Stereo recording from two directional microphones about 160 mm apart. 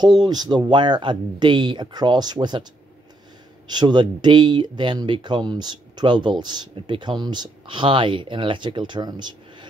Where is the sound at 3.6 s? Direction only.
25° right (ahead or behind).